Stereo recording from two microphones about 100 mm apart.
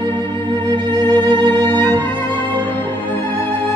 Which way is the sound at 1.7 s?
20° left (ahead or behind).